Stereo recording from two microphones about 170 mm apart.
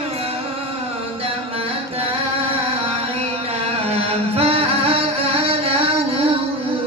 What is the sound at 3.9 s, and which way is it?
Music, 35° right (ahead or behind).